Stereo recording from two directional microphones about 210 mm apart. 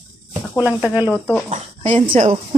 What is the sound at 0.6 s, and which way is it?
Speech, 5° right (ahead or behind).